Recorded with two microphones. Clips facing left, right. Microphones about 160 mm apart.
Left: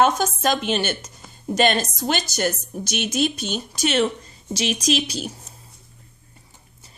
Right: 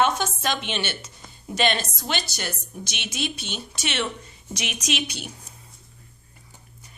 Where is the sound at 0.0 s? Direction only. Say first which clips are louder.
Left 4 dB; 45° left (ahead or behind).